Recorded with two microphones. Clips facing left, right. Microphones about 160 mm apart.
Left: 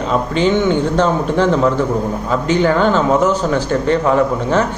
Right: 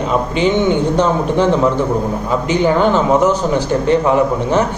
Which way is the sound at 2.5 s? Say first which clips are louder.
Even; 15° right (ahead or behind).